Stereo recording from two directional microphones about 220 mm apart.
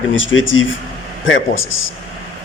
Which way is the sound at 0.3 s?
60° left (ahead or behind).